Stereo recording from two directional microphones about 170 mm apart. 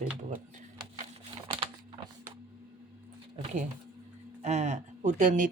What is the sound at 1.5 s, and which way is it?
Typing, 30° right (ahead or behind).